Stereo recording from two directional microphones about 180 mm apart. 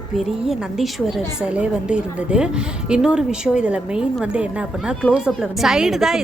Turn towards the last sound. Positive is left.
turn(degrees=0)  # may be behind; listen again after turning